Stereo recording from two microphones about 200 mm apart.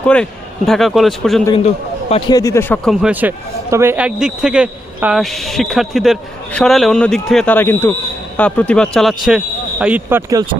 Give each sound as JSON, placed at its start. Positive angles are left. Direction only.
{"t": 0.0, "sound": "a man's voice", "side_deg": 5}
{"t": 1.5, "sound": "a man's voice", "side_deg": 30}
{"t": 2.9, "sound": "a man's voice", "side_deg": -5}